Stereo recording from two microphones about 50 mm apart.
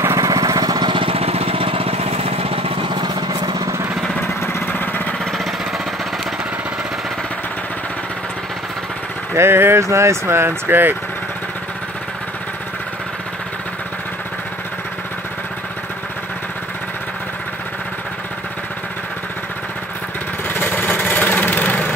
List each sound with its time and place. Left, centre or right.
0.0 s lawn mower: right
4.7 s a sound: left
9.3 s speech: right
9.8 s speech: right
10.3 s speech: right
20.4 s a sound: left